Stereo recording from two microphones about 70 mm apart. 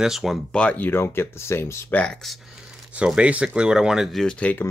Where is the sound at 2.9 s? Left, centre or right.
Centre.